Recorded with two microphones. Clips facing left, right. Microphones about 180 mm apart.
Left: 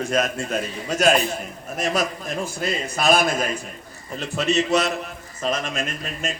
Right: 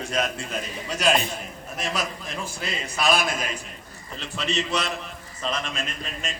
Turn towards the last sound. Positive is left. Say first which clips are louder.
# left 5 dB
turn(degrees=45)  # may be behind; listen again after turning